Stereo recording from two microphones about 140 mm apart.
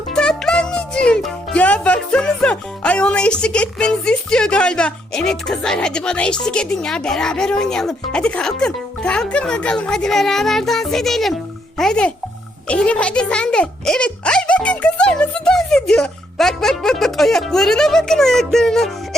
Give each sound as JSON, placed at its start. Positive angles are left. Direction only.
{"t": 0.1, "sound": "music", "side_deg": 5}
{"t": 11.8, "sound": "a child's voice", "side_deg": 5}
{"t": 12.6, "sound": "music", "side_deg": 10}